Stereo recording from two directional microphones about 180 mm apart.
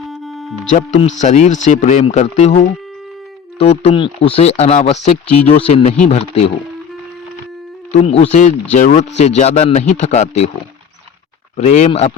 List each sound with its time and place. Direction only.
0.0 s music: centre (ahead or behind)
0.7 s speech: 45° left (ahead or behind)
3.6 s speech: 30° left (ahead or behind)
8.0 s speech: 35° left (ahead or behind)
11.5 s speech: 35° left (ahead or behind)